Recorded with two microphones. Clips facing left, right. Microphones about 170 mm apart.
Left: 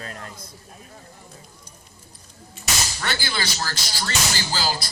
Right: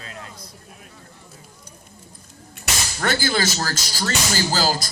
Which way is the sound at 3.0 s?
45° right (ahead or behind).